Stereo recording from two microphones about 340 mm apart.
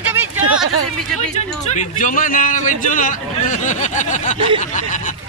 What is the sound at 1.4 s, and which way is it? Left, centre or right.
A man's voice, left.